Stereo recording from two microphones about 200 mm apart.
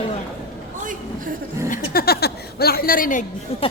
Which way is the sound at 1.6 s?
45° left (ahead or behind).